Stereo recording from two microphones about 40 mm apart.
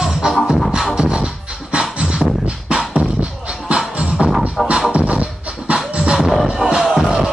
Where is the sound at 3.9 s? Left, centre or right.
Right.